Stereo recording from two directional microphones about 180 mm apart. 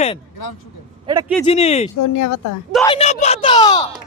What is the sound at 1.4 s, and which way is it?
Speech, 35° left (ahead or behind).